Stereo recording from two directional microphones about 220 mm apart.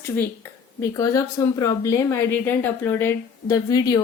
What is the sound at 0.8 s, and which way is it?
Speech, 15° left (ahead or behind).